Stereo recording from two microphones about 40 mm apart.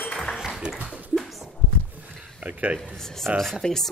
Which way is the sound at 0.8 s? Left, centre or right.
Right.